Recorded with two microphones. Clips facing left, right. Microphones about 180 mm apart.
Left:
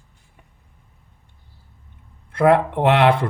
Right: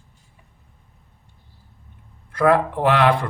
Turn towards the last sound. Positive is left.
turn(degrees=25)  # may be behind; listen again after turning